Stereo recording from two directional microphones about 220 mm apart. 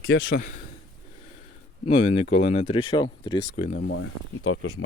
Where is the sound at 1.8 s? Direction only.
25° left (ahead or behind).